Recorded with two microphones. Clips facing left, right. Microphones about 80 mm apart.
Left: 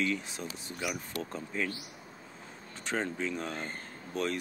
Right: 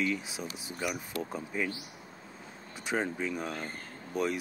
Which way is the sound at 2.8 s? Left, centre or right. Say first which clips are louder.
Right 1 dB; centre.